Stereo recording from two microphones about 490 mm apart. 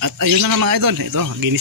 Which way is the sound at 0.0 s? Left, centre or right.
Right.